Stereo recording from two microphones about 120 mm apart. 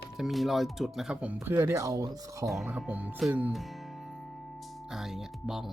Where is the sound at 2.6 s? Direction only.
10° right (ahead or behind).